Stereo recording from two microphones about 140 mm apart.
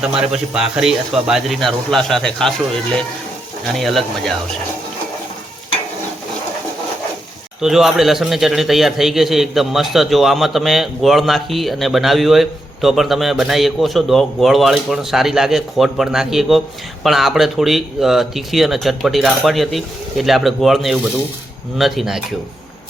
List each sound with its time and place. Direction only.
0.2 s a man's voice: 5° right (ahead or behind)
3.7 s a man's voice: centre (ahead or behind)
7.6 s a man's voice: centre (ahead or behind)